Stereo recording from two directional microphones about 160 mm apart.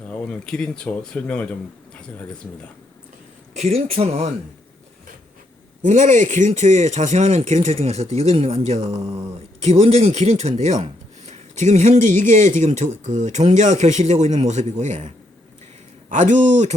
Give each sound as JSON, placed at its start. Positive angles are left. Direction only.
{"t": 0.1, "sound": "speech", "side_deg": 5}
{"t": 3.5, "sound": "speech", "side_deg": -40}
{"t": 5.8, "sound": "speech", "side_deg": -50}